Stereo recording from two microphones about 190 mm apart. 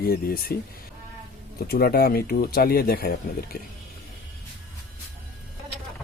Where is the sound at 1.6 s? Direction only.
55° left (ahead or behind).